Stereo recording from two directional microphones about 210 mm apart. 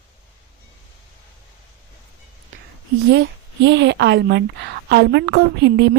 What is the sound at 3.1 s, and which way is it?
A woman's voice, 55° right (ahead or behind).